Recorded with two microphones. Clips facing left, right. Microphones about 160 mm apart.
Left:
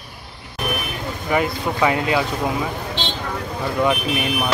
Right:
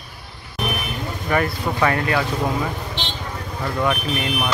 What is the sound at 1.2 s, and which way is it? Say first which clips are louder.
Speech: left 1 dB; 15° left (ahead or behind).